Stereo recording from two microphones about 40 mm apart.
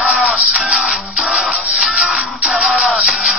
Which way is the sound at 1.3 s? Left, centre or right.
Centre.